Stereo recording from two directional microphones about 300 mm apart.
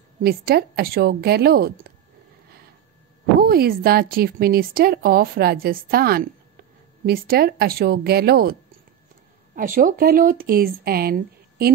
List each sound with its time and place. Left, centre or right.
0.2 s speech: right
3.3 s speech: right
9.6 s speech: right